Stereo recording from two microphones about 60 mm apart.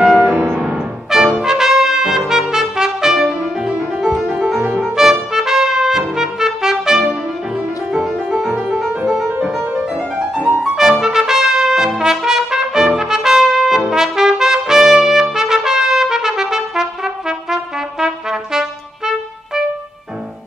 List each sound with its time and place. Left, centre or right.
0.0 s music: centre
0.3 s music: right
1.4 s trumpet: centre
7.9 s music: centre
10.1 s music: centre
10.6 s trumpet: centre